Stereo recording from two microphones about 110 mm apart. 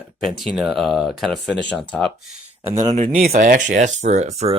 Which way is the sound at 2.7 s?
35° right (ahead or behind).